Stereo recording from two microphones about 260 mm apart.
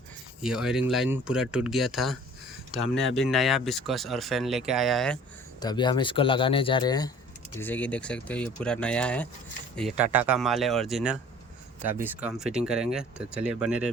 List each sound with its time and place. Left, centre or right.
0.4 s speech: centre
5.5 s speech: centre